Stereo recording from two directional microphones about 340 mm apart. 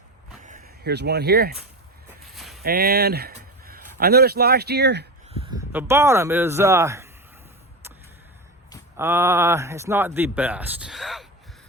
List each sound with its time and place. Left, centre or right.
0.4 s speech: right
2.3 s a sound: centre
2.6 s speech: right
5.5 s speech: centre
9.0 s speech: centre